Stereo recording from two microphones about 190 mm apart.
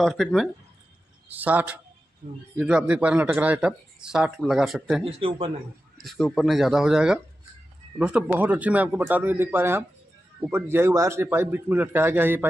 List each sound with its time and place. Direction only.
0.0 s a man's voice: centre (ahead or behind)
5.0 s a man's voice: 30° right (ahead or behind)
5.9 s a man's voice: centre (ahead or behind)